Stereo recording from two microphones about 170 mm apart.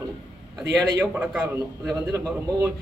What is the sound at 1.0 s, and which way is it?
Speech, 10° right (ahead or behind).